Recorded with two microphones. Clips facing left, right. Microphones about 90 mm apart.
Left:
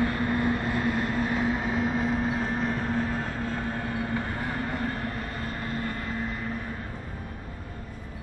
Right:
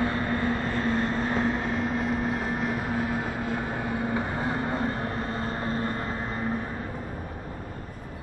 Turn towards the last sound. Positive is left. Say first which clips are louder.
# right 3 dB
turn(degrees=-35)  # may be behind; listen again after turning